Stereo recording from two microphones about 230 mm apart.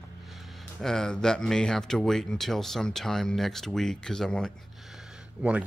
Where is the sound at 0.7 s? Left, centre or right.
Centre.